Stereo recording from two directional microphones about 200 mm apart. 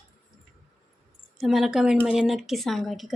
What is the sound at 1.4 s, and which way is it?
A woman's voice, centre (ahead or behind).